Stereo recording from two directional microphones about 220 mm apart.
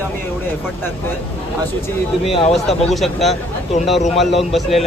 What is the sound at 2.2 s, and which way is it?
Speech, 25° left (ahead or behind).